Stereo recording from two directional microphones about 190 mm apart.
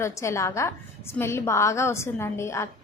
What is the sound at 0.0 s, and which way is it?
A woman's voice, 15° left (ahead or behind).